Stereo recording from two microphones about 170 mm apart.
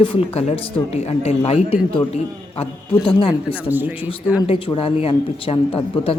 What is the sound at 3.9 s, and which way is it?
Speech, 30° left (ahead or behind).